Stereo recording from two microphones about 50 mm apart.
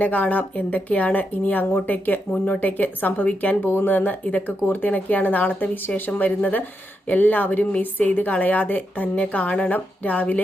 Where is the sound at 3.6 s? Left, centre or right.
Left.